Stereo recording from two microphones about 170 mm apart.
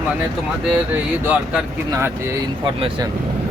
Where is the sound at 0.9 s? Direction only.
10° right (ahead or behind).